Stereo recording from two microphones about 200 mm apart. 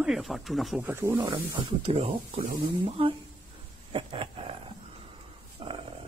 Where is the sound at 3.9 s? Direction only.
25° right (ahead or behind).